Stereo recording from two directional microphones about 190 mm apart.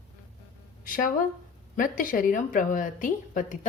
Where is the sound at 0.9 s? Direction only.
45° left (ahead or behind).